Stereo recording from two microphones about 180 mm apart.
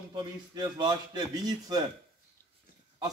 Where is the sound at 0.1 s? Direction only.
25° right (ahead or behind).